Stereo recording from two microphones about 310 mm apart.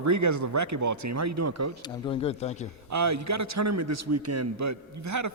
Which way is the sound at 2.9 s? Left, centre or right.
Right.